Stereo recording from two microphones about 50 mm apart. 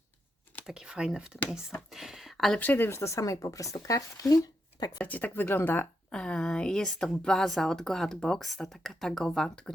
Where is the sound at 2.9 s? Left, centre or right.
Left.